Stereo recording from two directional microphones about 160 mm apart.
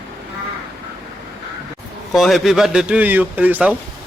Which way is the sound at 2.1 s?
Centre (ahead or behind).